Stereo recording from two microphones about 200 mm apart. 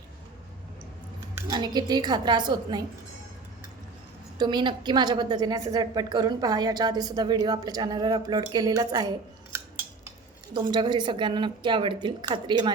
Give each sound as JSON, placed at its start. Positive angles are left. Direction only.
{"t": 1.5, "sound": "a woman's voice", "side_deg": -20}
{"t": 4.4, "sound": "a woman's voice", "side_deg": -20}